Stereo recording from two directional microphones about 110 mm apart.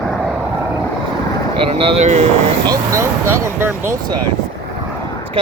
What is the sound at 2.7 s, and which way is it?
Speech, 25° right (ahead or behind).